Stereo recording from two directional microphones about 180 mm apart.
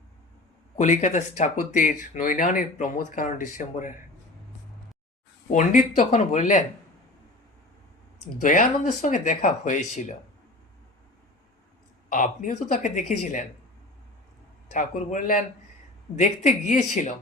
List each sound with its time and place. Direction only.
0.8 s speech: 40° left (ahead or behind)
5.5 s speech: 45° left (ahead or behind)
8.4 s speech: 45° left (ahead or behind)
12.0 s speech: 45° left (ahead or behind)
14.7 s speech: 45° left (ahead or behind)